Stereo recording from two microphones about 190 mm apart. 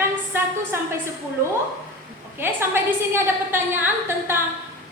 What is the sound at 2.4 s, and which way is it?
A woman's voice, 10° right (ahead or behind).